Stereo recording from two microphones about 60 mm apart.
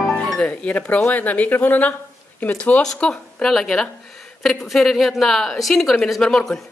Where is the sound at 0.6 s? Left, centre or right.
Left.